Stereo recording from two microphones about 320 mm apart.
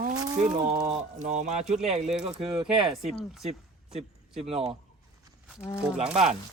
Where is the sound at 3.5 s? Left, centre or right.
Centre.